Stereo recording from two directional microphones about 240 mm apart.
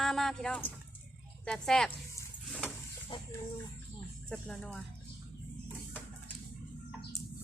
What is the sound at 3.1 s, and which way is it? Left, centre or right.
Speech, centre.